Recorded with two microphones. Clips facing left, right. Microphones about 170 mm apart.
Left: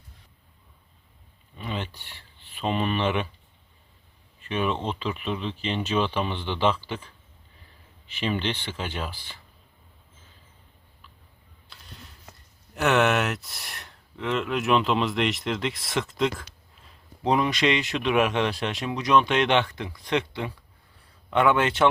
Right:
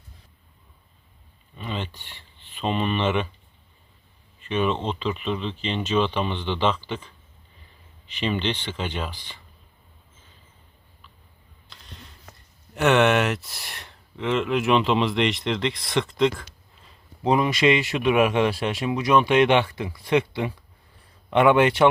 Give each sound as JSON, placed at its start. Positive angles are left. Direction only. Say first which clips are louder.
{"t": 1.5, "sound": "a sound", "louder": "right 1 dB", "side_deg": 10}
{"t": 2.6, "sound": "speech", "louder": "right 1 dB", "side_deg": 5}
{"t": 4.4, "sound": "speech", "louder": "right 3 dB", "side_deg": 10}
{"t": 12.7, "sound": "a man's voice", "louder": "right 3 dB", "side_deg": 0}